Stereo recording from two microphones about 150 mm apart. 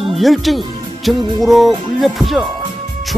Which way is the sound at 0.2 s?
Centre (ahead or behind).